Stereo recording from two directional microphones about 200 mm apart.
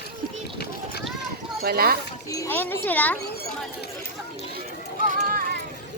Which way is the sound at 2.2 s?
15° left (ahead or behind).